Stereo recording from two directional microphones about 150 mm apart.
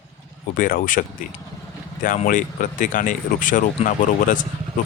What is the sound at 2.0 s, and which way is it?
Speech, 65° left (ahead or behind).